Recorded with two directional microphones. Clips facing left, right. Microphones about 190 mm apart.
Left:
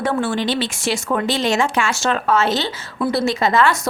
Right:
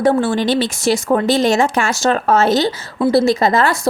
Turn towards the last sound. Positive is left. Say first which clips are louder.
# right 2 dB
turn(degrees=-40)  # may be behind; listen again after turning